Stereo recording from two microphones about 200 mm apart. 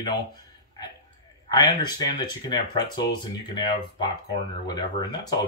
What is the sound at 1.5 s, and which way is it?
Speech, 20° left (ahead or behind).